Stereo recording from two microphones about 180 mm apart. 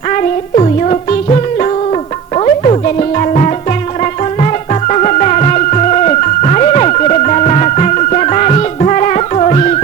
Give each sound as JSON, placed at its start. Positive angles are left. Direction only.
{"t": 0.1, "sound": "music", "side_deg": 40}
{"t": 4.7, "sound": "music", "side_deg": 40}